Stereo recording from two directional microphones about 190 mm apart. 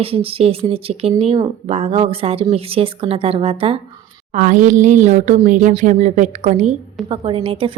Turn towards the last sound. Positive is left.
turn(degrees=-30)  # may be behind; listen again after turning